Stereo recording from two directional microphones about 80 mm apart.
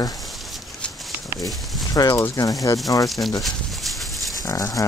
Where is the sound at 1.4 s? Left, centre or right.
Centre.